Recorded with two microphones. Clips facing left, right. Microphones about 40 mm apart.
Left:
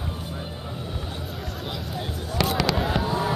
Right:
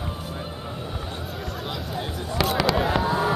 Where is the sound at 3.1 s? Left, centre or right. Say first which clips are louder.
Right 2 dB; centre.